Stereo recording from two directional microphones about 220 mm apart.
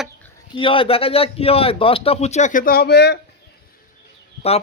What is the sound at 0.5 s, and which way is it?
Speech, 25° left (ahead or behind).